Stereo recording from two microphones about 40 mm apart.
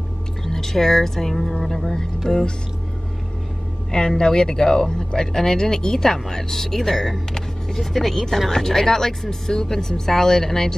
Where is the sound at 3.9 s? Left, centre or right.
Centre.